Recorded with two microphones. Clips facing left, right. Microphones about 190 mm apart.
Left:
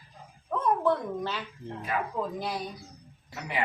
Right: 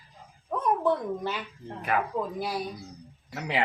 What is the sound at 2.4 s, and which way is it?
Speech, 10° right (ahead or behind).